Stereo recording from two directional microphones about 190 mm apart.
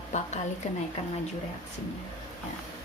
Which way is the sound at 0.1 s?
40° left (ahead or behind).